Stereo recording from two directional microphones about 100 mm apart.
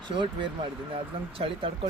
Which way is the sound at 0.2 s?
60° right (ahead or behind).